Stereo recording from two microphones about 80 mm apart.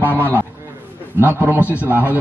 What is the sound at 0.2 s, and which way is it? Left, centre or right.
A man's voice, right.